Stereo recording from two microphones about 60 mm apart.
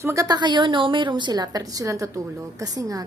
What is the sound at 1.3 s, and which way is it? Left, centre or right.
A woman's voice, right.